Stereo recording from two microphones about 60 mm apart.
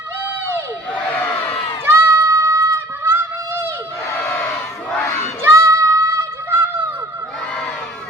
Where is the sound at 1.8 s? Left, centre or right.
Right.